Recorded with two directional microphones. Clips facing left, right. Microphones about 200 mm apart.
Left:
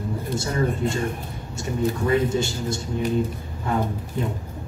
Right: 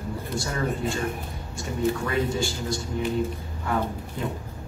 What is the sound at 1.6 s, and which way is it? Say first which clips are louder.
A man's voice: left 2 dB; 25° left (ahead or behind).